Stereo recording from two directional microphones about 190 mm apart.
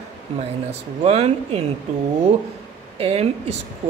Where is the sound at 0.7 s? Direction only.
35° right (ahead or behind).